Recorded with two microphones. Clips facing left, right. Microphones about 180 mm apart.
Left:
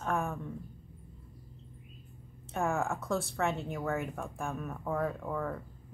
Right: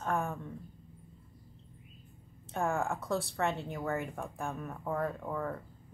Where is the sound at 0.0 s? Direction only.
Centre (ahead or behind).